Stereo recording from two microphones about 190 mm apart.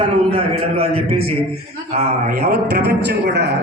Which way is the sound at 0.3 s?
30° right (ahead or behind).